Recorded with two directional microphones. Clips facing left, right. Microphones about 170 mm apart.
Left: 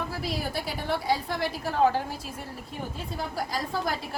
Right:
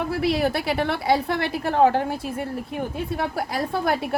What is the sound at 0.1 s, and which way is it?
A woman's voice, 65° right (ahead or behind).